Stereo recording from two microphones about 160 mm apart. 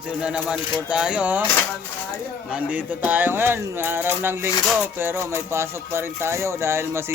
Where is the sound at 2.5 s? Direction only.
10° right (ahead or behind).